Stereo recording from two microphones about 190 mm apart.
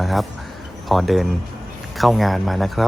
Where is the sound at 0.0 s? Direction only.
Centre (ahead or behind).